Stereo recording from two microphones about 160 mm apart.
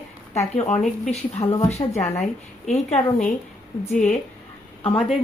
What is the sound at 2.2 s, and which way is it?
Speech, 45° left (ahead or behind).